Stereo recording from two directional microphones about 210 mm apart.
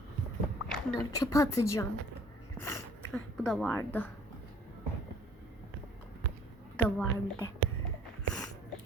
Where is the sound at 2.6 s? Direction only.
15° left (ahead or behind).